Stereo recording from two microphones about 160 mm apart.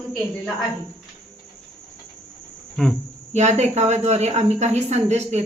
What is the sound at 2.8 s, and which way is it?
Insect, 5° left (ahead or behind).